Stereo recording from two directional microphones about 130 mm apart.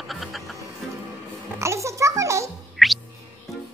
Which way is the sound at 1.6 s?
20° right (ahead or behind).